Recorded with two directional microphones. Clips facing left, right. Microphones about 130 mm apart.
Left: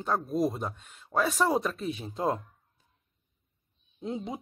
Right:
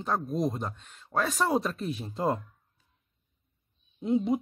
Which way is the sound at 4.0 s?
5° right (ahead or behind).